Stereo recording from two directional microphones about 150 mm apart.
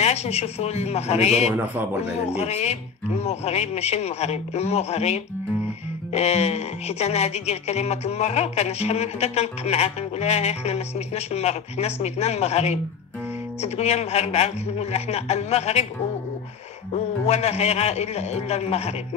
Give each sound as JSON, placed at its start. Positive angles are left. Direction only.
{"t": 0.0, "sound": "speech", "side_deg": 45}
{"t": 1.5, "sound": "a man's voice", "side_deg": -10}
{"t": 2.2, "sound": "speech", "side_deg": 45}
{"t": 16.9, "sound": "speech", "side_deg": 45}